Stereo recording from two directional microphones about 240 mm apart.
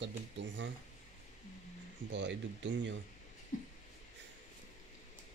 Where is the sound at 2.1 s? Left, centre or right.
Right.